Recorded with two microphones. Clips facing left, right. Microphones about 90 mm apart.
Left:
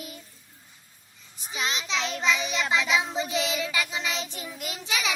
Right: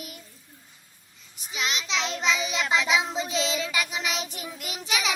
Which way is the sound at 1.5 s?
20° left (ahead or behind).